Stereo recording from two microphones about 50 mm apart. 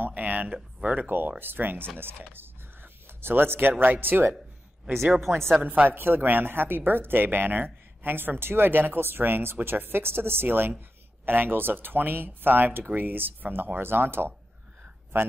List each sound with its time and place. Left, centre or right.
0.0 s a sound: right
0.8 s speech: right
2.0 s a sound: right
3.8 s speech: right
5.3 s a woman's voice: right
5.6 s speech: right
5.9 s speech: right